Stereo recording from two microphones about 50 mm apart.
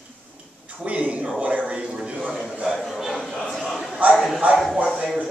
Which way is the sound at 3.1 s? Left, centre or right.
Centre.